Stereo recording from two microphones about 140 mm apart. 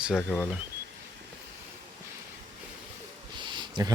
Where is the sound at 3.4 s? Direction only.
35° right (ahead or behind).